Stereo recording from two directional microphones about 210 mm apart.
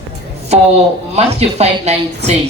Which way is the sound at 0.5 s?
30° right (ahead or behind).